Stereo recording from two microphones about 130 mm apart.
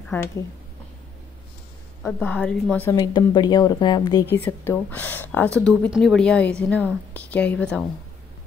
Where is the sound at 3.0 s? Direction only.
35° left (ahead or behind).